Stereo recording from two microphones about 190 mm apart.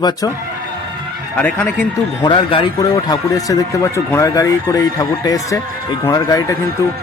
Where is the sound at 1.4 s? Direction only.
5° left (ahead or behind).